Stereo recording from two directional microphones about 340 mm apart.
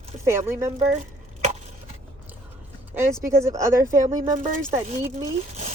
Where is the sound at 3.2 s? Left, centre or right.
Centre.